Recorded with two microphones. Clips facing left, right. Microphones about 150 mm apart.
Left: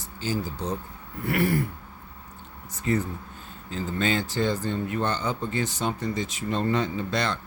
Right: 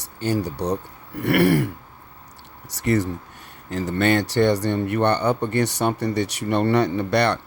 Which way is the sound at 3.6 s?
75° right (ahead or behind).